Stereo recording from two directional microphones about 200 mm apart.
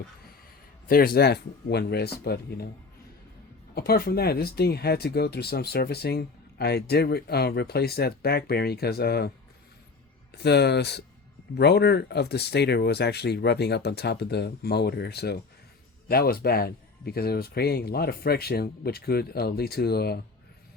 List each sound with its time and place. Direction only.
0.9 s speech: 50° left (ahead or behind)
3.8 s speech: 50° left (ahead or behind)
10.4 s speech: 55° left (ahead or behind)